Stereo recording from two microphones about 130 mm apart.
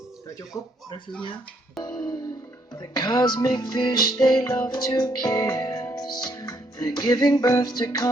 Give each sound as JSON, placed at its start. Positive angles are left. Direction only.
{"t": 1.8, "sound": "music", "side_deg": 30}